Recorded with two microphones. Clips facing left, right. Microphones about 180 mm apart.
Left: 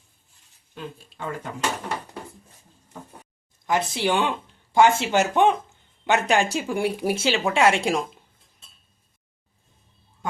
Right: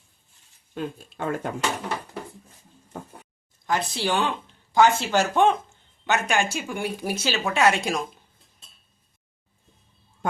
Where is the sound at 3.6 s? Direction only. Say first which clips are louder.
Left 2 dB; 20° left (ahead or behind).